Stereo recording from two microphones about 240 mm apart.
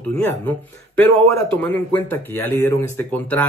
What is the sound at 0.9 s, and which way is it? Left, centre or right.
Speech, centre.